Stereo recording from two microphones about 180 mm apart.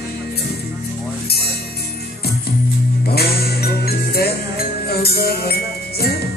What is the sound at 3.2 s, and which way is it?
Music, 60° left (ahead or behind).